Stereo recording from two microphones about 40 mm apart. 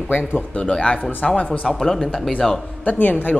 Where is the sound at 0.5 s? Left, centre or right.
Left.